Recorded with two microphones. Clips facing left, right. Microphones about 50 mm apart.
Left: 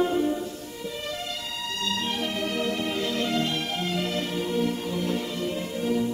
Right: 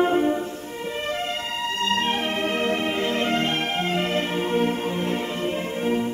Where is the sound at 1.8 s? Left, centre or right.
Right.